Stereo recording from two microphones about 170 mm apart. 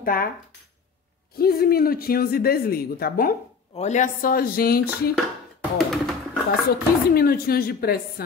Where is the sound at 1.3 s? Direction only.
65° left (ahead or behind).